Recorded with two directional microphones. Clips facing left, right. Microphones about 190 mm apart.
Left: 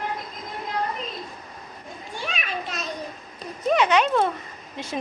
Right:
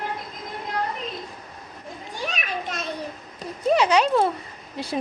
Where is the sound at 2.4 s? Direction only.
50° right (ahead or behind).